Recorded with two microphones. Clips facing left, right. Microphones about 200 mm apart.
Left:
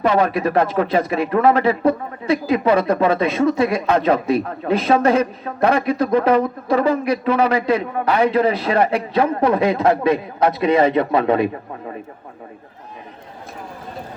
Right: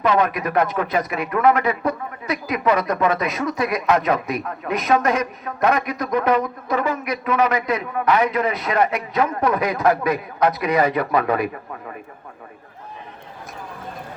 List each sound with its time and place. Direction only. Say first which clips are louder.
0.0 s a man's voice: left 3 dB; 30° left (ahead or behind)